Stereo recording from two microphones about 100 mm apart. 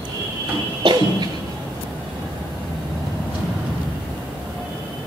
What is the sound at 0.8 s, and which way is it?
Music, 45° right (ahead or behind).